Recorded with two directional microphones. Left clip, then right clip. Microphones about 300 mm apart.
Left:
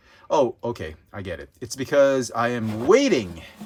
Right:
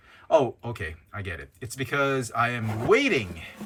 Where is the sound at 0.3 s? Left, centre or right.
Centre.